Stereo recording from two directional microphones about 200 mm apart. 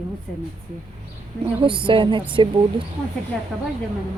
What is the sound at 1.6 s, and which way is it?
A woman's voice, 25° right (ahead or behind).